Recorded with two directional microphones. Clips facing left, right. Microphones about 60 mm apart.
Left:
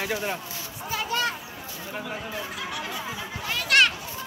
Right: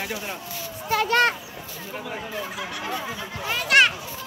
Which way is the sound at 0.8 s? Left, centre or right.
Right.